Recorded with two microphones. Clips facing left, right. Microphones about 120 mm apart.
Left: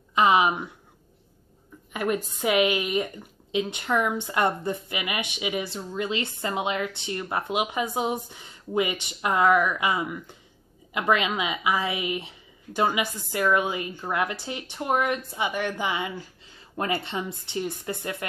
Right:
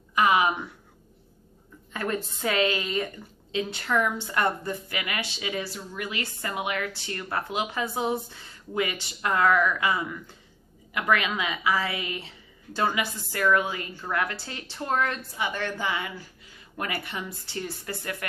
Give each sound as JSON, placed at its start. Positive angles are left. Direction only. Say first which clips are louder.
{"t": 0.1, "sound": "a woman's voice", "louder": "left 2 dB", "side_deg": 20}
{"t": 1.9, "sound": "a woman's voice", "louder": "left 3 dB", "side_deg": 15}